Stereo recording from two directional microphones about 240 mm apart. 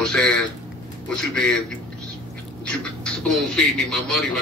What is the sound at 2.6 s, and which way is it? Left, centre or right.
Speech, centre.